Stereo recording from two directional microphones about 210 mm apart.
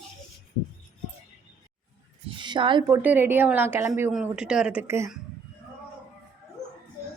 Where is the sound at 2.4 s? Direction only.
20° right (ahead or behind).